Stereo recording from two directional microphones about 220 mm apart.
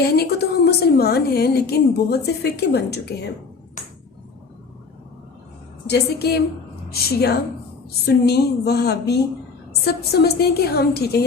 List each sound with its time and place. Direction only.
0.0 s a woman's voice: 45° left (ahead or behind)
3.8 s a sound: 35° left (ahead or behind)
5.9 s a woman's voice: 45° left (ahead or behind)